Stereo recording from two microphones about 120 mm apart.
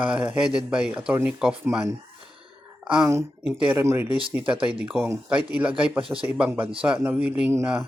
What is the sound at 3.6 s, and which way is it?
Speech, 20° right (ahead or behind).